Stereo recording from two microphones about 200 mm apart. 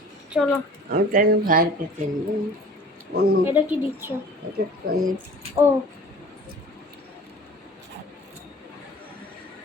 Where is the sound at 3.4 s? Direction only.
10° right (ahead or behind).